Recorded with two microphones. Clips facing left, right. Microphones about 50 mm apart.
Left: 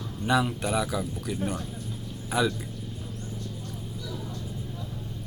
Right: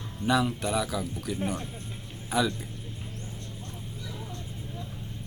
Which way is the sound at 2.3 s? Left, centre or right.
Centre.